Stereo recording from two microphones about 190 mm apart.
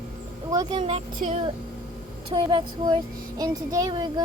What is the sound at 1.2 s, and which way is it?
Speech, 35° right (ahead or behind).